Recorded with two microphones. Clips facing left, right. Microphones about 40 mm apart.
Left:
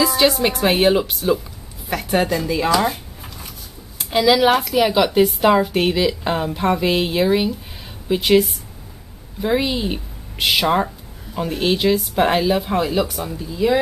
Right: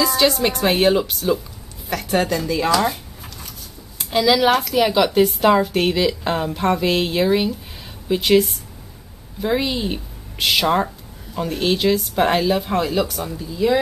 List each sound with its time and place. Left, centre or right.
0.0 s a woman's voice: centre